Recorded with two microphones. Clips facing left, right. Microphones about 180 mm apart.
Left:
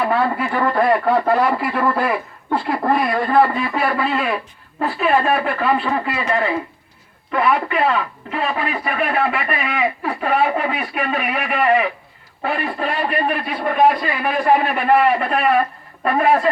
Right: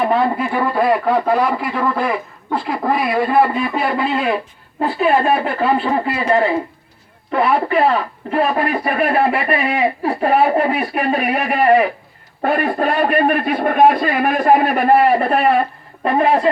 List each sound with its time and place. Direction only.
0.0 s a man's voice: 20° right (ahead or behind); by 11.9 s 35° right (ahead or behind)
12.4 s a man's voice: 50° right (ahead or behind); by 16.5 s 25° right (ahead or behind)